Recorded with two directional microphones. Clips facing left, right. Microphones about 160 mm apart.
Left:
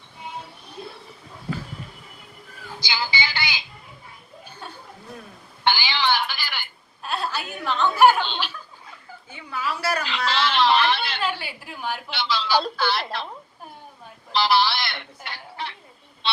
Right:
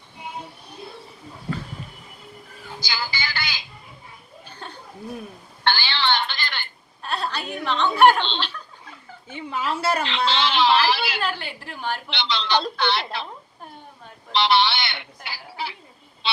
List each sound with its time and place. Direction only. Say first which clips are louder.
2.9 s music: left 3 dB; 20° left (ahead or behind)
5.6 s telephone: left 1 dB; 10° left (ahead or behind)
9.3 s a woman's voice: right 3 dB; 25° right (ahead or behind)
10.3 s a woman's voice: even; centre (ahead or behind)
10.9 s a sound: right 2 dB; 10° right (ahead or behind)
11.2 s a woman's voice: even; 10° left (ahead or behind)
14.3 s speech: right 1 dB; centre (ahead or behind)
16.2 s vehicle: even; centre (ahead or behind)